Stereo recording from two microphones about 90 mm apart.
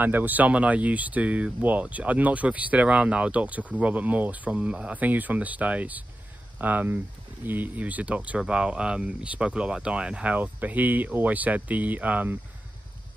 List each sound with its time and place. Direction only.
0.0 s speech: 20° right (ahead or behind)